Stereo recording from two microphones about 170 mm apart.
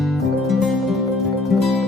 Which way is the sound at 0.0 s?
Centre (ahead or behind).